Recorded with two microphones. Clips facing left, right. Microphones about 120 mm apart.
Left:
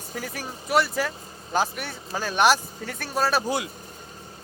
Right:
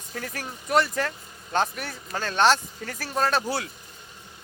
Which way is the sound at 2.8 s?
Centre (ahead or behind).